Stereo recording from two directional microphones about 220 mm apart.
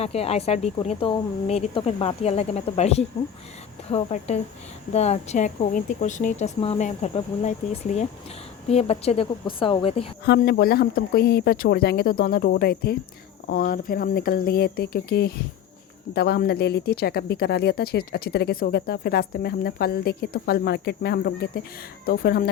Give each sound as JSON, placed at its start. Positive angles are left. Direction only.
{"t": 0.0, "sound": "speech", "side_deg": 25}
{"t": 10.2, "sound": "speech", "side_deg": 45}